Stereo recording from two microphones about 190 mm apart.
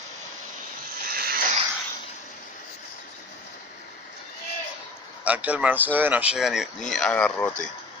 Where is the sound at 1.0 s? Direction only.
50° right (ahead or behind).